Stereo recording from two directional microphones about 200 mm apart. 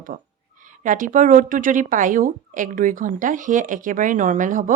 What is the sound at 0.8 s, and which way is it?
A woman's voice, 40° right (ahead or behind).